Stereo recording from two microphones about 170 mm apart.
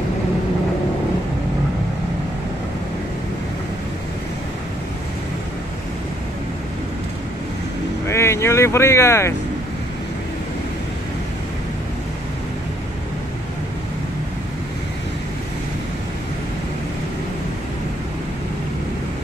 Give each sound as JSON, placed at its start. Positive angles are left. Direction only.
{"t": 8.1, "sound": "speech", "side_deg": 15}